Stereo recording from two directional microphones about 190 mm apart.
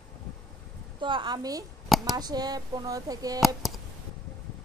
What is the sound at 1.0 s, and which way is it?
Speech, 25° right (ahead or behind).